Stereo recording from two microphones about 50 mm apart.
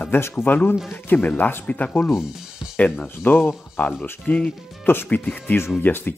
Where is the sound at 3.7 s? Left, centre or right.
Left.